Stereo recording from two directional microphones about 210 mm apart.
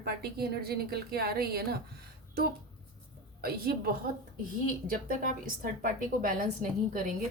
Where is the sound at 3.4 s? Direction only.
45° right (ahead or behind).